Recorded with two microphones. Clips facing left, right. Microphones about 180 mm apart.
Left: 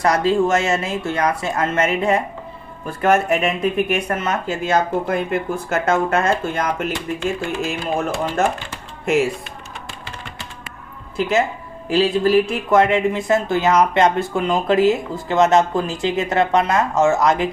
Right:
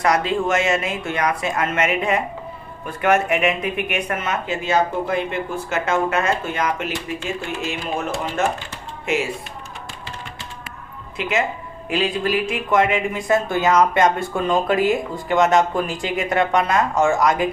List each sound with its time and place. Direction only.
0.0 s speech: 35° left (ahead or behind)
4.3 s speech: 45° left (ahead or behind)
11.2 s speech: 30° left (ahead or behind)